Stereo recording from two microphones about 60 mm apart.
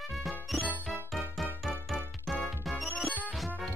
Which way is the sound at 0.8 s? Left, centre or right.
Centre.